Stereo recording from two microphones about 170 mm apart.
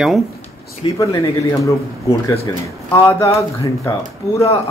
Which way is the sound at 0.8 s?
30° left (ahead or behind).